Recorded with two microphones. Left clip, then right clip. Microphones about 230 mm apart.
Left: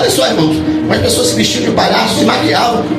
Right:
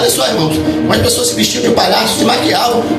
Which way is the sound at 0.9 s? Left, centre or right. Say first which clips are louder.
Left 1 dB; right.